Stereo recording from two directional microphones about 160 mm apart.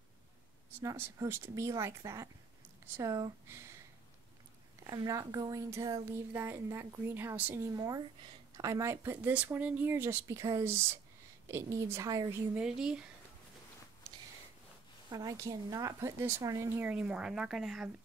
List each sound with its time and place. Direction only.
0.8 s speech: 15° right (ahead or behind)
4.8 s speech: 25° right (ahead or behind)
7.7 s a woman's voice: 25° right (ahead or behind)
12.5 s speech: 5° right (ahead or behind)
15.0 s speech: 20° right (ahead or behind); by 17.8 s centre (ahead or behind)